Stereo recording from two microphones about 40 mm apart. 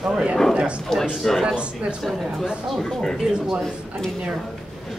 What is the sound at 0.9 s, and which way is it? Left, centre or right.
Speech, centre.